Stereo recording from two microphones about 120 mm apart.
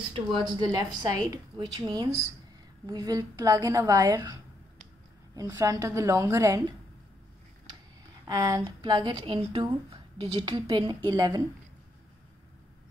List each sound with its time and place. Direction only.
0.5 s a woman's voice: 35° right (ahead or behind)
8.3 s speech: 30° right (ahead or behind)